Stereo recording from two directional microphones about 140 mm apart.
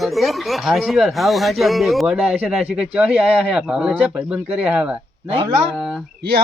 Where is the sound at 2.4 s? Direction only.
10° right (ahead or behind).